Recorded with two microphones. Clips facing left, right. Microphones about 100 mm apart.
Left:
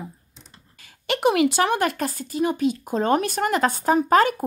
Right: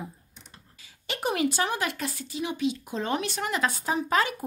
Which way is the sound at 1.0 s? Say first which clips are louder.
Left 8 dB; 80° left.